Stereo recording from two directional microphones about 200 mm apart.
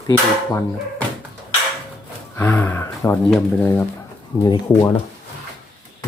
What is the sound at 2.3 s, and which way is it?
Speech, 10° left (ahead or behind).